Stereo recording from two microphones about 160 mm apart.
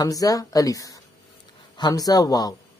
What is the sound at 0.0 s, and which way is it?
Speech, 20° left (ahead or behind).